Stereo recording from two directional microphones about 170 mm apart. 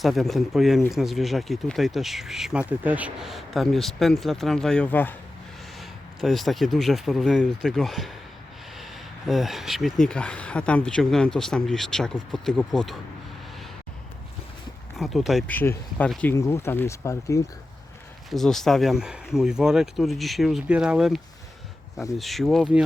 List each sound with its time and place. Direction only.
0.0 s speech: centre (ahead or behind)
6.1 s speech: centre (ahead or behind)
14.9 s speech: centre (ahead or behind)
15.5 s speech: 15° left (ahead or behind)
18.3 s speech: centre (ahead or behind)
22.2 s speech: centre (ahead or behind)